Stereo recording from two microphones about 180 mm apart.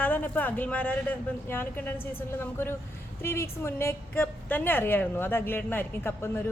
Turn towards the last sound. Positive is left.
turn(degrees=15)  # may be behind; listen again after turning